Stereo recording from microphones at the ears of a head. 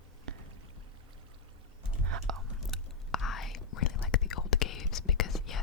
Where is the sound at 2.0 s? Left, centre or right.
Right.